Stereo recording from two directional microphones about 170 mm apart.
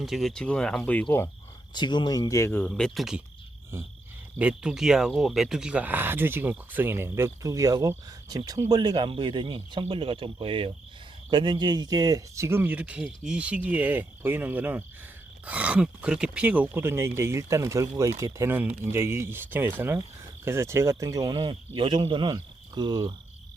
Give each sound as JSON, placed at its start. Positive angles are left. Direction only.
{"t": 0.0, "sound": "speech", "side_deg": 0}
{"t": 1.7, "sound": "speech", "side_deg": 25}
{"t": 4.4, "sound": "speech", "side_deg": -5}